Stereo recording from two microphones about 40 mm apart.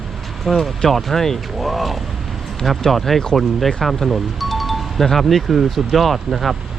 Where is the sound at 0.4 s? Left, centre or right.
Centre.